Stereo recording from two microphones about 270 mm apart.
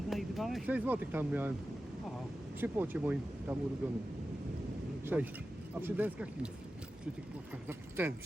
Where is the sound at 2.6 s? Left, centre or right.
Centre.